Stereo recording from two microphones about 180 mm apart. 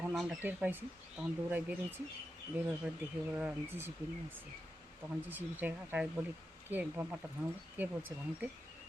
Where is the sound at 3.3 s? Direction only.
10° right (ahead or behind).